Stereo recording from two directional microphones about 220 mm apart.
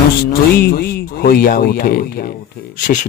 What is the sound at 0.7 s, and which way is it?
A man's voice, 45° left (ahead or behind).